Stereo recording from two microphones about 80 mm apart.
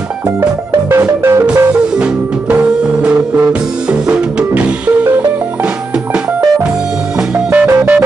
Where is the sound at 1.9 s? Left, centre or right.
Centre.